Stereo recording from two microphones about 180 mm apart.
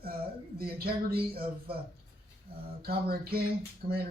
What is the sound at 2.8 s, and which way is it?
Speech, 55° right (ahead or behind).